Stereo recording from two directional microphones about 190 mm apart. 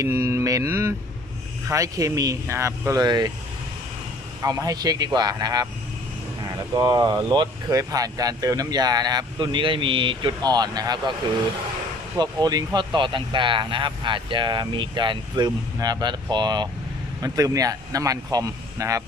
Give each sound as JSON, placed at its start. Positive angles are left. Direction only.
{"t": 0.0, "sound": "speech", "side_deg": -15}
{"t": 4.4, "sound": "speech", "side_deg": -20}
{"t": 12.2, "sound": "speech", "side_deg": -20}